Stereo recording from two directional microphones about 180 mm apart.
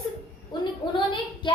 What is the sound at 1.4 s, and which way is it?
Child singing, 25° left (ahead or behind).